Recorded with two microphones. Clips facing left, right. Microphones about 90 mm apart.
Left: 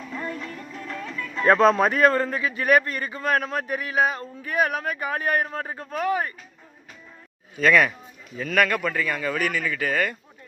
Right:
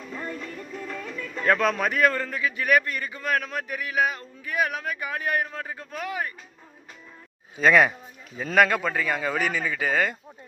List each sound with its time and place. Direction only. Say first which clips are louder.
0.3 s music: even; centre (ahead or behind)
1.4 s a man's voice: left 6 dB; 35° left (ahead or behind)
7.5 s speech: even; 20° right (ahead or behind)